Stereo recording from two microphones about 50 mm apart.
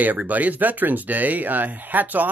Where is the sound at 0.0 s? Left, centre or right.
Right.